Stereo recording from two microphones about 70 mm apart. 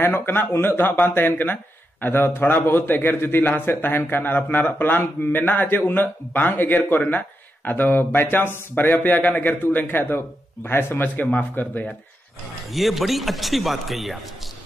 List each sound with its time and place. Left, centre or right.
0.0 s a man's voice: left
12.7 s a man's voice: centre